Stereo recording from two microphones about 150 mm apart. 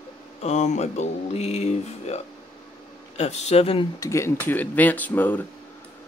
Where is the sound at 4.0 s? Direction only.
20° left (ahead or behind).